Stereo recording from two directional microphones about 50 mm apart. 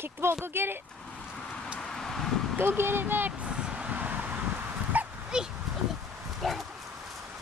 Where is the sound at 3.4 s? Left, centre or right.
Centre.